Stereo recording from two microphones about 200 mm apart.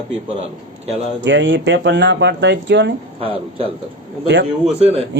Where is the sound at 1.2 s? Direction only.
65° right (ahead or behind).